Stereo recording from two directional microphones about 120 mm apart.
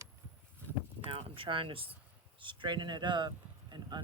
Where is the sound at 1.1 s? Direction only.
50° right (ahead or behind).